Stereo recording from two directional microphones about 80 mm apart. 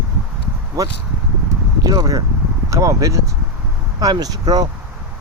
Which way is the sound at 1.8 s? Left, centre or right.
Right.